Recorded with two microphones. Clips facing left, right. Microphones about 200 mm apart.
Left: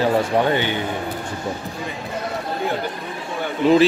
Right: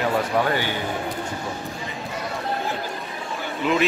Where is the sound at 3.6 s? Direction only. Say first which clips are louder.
Left 8 dB; 35° left (ahead or behind).